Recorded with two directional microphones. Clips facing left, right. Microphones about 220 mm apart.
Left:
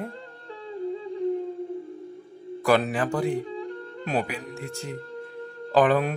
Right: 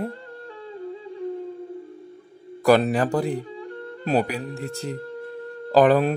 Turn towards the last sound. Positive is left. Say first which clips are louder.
# right 4 dB
turn(degrees=-35)  # may be behind; listen again after turning